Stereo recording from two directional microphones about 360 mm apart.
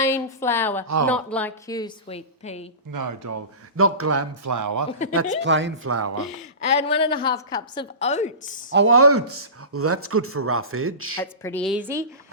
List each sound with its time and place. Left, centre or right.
0.0 s a woman's voice: centre
2.9 s speech: right
5.1 s speech: right
6.6 s a woman's voice: centre
8.7 s speech: right
11.4 s a woman's voice: centre